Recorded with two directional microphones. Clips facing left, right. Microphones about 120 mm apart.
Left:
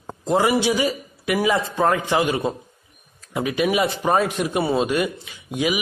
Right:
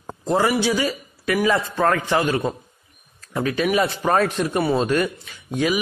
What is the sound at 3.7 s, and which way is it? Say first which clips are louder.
A man's voice: right 1 dB; 15° left (ahead or behind).